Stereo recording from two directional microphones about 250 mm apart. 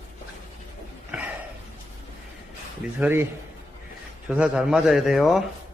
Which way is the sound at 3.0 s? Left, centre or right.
Centre.